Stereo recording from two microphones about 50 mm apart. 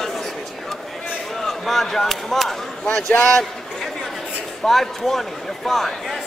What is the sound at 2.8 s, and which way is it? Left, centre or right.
Speech, centre.